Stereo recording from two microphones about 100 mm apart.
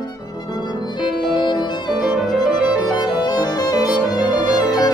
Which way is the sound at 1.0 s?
50° left (ahead or behind).